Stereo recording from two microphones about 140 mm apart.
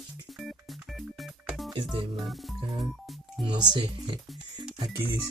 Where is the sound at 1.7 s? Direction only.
35° right (ahead or behind).